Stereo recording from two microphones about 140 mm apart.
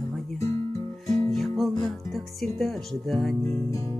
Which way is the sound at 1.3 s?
Centre (ahead or behind).